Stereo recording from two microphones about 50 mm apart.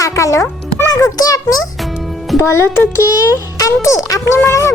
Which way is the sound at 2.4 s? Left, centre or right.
Left.